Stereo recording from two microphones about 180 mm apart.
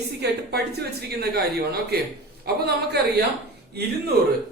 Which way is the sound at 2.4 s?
65° right (ahead or behind).